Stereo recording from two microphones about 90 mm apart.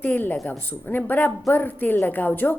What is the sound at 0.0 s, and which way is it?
A woman's voice, 20° left (ahead or behind).